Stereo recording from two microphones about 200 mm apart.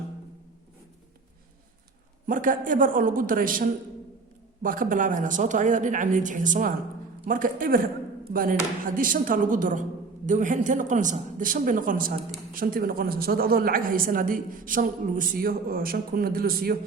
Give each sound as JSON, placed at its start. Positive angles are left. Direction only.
{"t": 2.2, "sound": "a woman's voice", "side_deg": -40}